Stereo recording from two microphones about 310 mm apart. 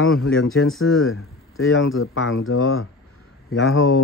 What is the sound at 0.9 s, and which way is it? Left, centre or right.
Speech, left.